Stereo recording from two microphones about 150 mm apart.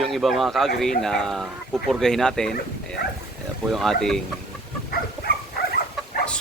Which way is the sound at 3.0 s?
90° left.